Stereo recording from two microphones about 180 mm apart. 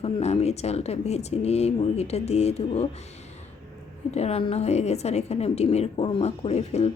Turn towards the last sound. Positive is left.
turn(degrees=35)  # may be behind; listen again after turning